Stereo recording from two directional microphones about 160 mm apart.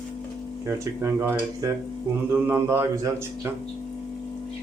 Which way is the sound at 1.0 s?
20° right (ahead or behind).